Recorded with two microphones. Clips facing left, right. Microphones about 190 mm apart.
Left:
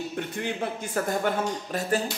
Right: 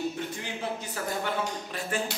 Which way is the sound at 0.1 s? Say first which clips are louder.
Left 4 dB; 60° left (ahead or behind).